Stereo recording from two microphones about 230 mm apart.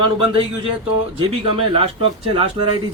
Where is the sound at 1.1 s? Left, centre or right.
Right.